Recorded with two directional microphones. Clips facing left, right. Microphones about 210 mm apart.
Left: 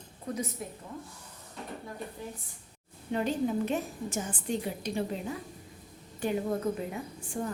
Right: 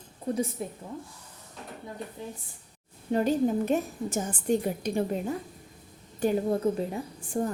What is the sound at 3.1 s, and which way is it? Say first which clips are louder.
A woman's voice: right 5 dB; 40° right (ahead or behind).